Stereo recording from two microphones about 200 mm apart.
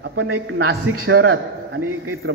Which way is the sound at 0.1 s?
90° right.